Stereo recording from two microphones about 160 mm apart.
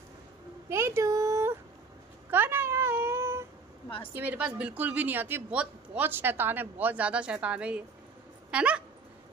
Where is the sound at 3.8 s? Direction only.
35° left (ahead or behind).